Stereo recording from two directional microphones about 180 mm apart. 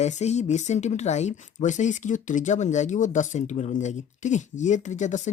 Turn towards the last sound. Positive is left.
turn(degrees=40)  # may be behind; listen again after turning